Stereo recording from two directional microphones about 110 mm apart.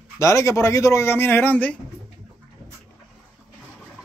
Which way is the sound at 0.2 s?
25° left (ahead or behind).